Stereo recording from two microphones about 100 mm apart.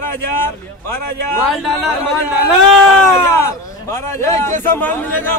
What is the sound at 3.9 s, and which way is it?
A man's voice, 30° left (ahead or behind).